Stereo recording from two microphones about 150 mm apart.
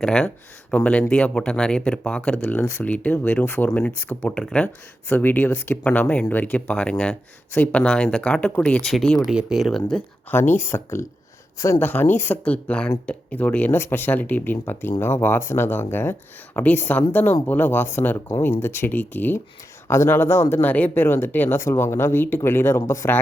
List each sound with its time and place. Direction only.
0.0 s speech: 5° left (ahead or behind)
9.9 s speech: 15° left (ahead or behind)